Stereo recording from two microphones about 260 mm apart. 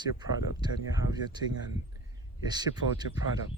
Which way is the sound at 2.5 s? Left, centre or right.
Centre.